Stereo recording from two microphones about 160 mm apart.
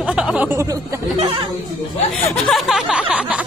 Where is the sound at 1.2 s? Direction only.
35° right (ahead or behind).